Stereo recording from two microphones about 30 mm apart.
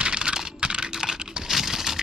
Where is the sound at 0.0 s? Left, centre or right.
Right.